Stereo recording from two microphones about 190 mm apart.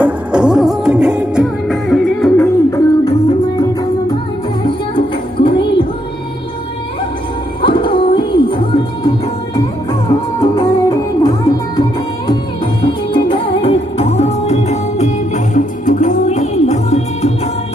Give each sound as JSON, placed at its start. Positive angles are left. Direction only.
{"t": 0.0, "sound": "music", "side_deg": -5}
{"t": 4.9, "sound": "music", "side_deg": 25}
{"t": 7.6, "sound": "music", "side_deg": 25}
{"t": 10.5, "sound": "music", "side_deg": 15}
{"t": 12.8, "sound": "music", "side_deg": 25}